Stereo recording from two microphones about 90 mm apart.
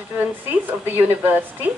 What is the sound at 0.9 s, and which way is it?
Speech, 20° right (ahead or behind).